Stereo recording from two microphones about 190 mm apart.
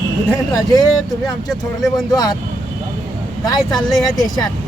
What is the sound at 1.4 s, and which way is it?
Speech, centre (ahead or behind).